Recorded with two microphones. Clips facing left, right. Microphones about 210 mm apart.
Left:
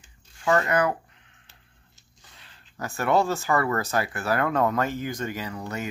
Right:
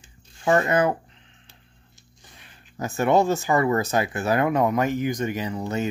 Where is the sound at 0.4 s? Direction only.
25° right (ahead or behind).